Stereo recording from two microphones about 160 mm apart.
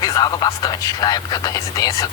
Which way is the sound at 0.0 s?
25° left (ahead or behind).